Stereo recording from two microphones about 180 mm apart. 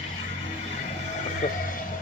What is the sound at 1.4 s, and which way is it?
Music, 45° left (ahead or behind).